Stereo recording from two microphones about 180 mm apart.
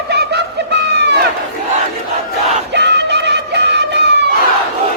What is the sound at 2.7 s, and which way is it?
Music, 70° right (ahead or behind).